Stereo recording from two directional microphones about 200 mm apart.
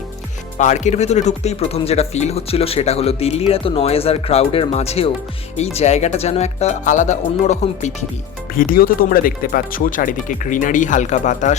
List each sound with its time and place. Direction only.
0.6 s speech: 35° left (ahead or behind)
8.5 s speech: 45° left (ahead or behind)